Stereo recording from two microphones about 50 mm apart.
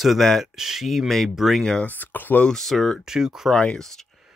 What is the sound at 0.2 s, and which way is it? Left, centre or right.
Speech, centre.